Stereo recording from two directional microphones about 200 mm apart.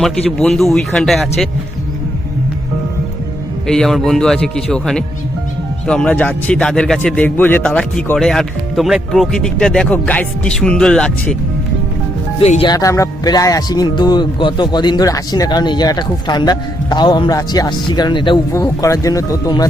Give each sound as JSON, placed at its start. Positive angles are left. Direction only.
{"t": 0.0, "sound": "speech", "side_deg": 0}
{"t": 3.7, "sound": "speech", "side_deg": 0}
{"t": 12.4, "sound": "speech", "side_deg": 30}